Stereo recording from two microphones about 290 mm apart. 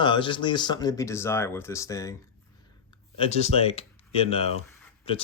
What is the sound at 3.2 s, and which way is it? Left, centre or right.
Speech, left.